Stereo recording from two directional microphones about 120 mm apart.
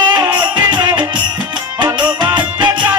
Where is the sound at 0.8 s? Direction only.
35° right (ahead or behind).